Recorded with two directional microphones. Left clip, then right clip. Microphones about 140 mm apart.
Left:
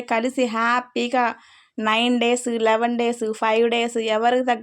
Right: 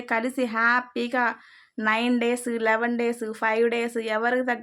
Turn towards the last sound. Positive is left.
turn(degrees=30)  # may be behind; listen again after turning